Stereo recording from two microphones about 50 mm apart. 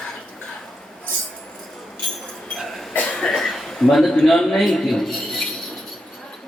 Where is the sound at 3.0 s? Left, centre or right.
Centre.